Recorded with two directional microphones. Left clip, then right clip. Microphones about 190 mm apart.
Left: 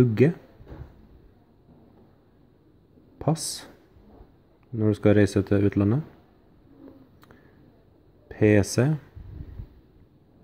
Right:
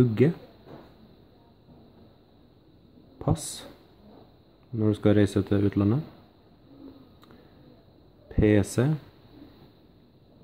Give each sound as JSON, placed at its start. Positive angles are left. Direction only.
{"t": 0.0, "sound": "speech", "side_deg": 10}
{"t": 3.2, "sound": "speech", "side_deg": 10}
{"t": 4.7, "sound": "speech", "side_deg": 5}
{"t": 8.3, "sound": "speech", "side_deg": 10}